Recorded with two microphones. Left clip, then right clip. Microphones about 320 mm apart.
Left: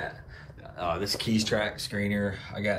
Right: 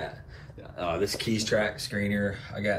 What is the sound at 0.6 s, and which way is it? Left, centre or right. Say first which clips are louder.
Speech: right 2 dB; centre.